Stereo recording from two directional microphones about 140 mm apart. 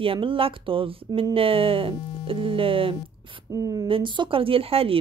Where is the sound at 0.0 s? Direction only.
40° right (ahead or behind).